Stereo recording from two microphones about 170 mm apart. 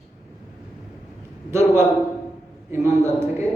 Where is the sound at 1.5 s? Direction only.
15° right (ahead or behind).